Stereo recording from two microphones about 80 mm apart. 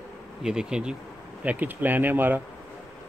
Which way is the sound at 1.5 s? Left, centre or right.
Right.